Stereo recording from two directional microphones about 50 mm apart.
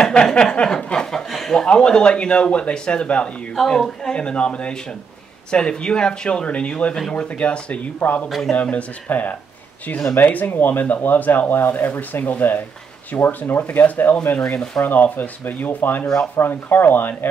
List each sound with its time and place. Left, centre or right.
0.0 s speech: centre
1.3 s speech: centre
1.7 s speech: centre
3.5 s speech: centre
7.2 s speech: left
14.5 s speech: centre
14.8 s speech: left